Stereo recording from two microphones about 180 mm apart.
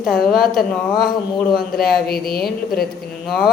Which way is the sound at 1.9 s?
60° left (ahead or behind).